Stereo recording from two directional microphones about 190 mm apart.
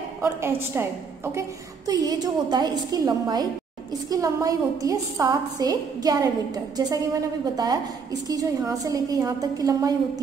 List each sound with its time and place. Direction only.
0.2 s a woman's voice: 10° right (ahead or behind)